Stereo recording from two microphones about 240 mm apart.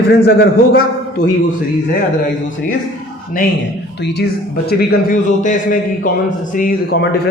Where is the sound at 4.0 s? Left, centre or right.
Left.